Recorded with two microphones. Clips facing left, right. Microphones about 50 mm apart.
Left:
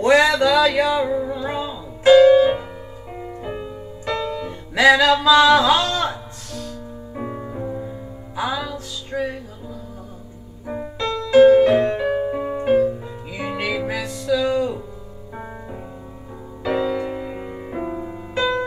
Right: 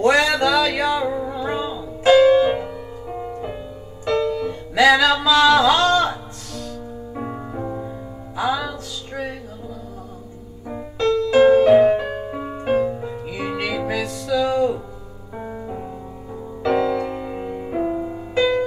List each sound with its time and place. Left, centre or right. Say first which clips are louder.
0.0 s music: left 2 dB; centre
10.7 s music: right 1 dB; centre
11.3 s music: left 1 dB; centre
15.3 s music: right 4 dB; centre